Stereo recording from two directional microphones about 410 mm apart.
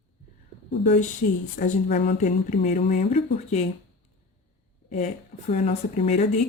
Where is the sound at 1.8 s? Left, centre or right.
Centre.